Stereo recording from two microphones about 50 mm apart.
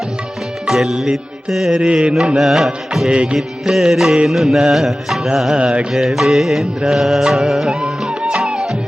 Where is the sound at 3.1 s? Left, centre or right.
Right.